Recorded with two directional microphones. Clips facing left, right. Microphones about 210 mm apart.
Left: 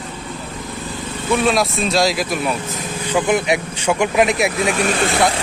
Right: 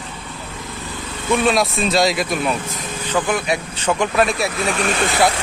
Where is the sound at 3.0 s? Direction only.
10° left (ahead or behind).